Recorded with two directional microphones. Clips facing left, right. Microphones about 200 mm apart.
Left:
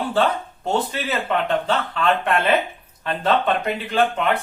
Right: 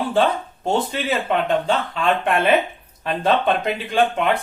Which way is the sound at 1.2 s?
10° right (ahead or behind).